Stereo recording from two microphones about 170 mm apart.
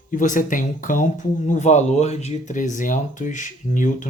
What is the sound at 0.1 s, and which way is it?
Speech, 50° left (ahead or behind).